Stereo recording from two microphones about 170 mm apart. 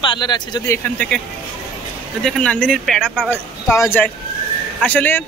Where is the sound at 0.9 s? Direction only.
5° left (ahead or behind).